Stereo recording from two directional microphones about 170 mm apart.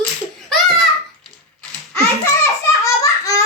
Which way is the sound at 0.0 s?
Centre (ahead or behind).